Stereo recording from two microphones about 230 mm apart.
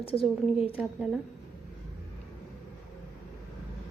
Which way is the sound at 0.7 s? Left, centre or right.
Centre.